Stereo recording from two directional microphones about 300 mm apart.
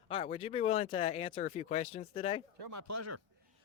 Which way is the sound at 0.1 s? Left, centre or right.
Centre.